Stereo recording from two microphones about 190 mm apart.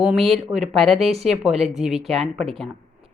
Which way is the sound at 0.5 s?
35° right (ahead or behind).